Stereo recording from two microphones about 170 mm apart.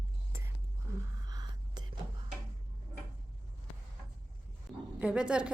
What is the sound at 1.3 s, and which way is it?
Whispering, 25° right (ahead or behind).